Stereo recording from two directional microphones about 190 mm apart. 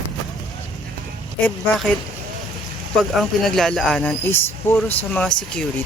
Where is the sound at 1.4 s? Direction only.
10° left (ahead or behind).